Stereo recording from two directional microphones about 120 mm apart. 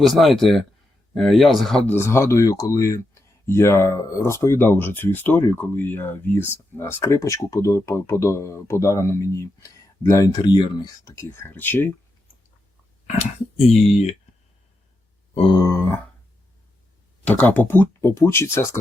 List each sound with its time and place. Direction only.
0.0 s speech: centre (ahead or behind)
1.9 s speech: 20° left (ahead or behind)
13.1 s speech: 65° left (ahead or behind)
15.5 s speech: 25° left (ahead or behind)
17.2 s speech: 15° left (ahead or behind)